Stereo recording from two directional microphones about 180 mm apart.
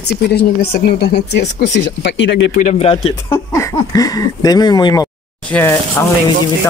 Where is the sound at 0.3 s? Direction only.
60° left (ahead or behind); by 2.3 s 80° left.